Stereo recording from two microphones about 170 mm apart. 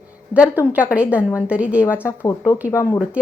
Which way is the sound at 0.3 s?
5° right (ahead or behind).